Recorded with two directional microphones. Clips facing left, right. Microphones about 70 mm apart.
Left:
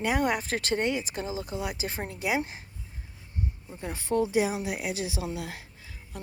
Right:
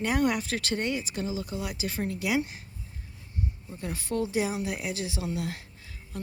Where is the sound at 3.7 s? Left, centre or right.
Left.